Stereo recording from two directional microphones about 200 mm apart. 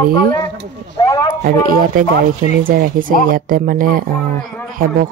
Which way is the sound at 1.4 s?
45° right (ahead or behind).